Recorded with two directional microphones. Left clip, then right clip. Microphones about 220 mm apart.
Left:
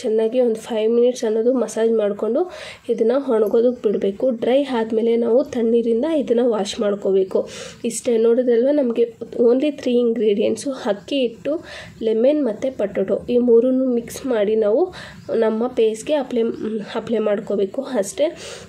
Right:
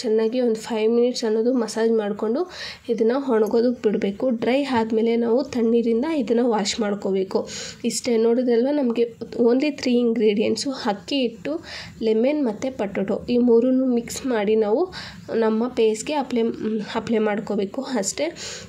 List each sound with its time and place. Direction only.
0.4 s a woman's voice: 20° right (ahead or behind)
7.3 s a woman's voice: 20° right (ahead or behind)
12.0 s a woman's voice: 25° right (ahead or behind)